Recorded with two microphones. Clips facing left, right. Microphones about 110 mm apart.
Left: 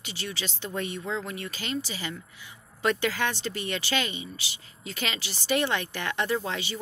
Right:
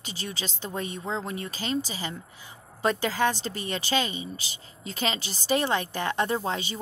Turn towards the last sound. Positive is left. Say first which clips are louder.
# right 1 dB
turn(degrees=-30)  # may be behind; listen again after turning